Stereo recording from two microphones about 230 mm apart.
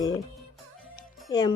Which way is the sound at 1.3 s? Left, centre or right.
Centre.